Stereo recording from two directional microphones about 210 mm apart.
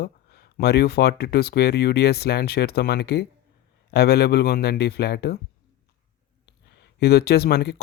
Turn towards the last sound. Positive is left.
turn(degrees=50)  # may be behind; listen again after turning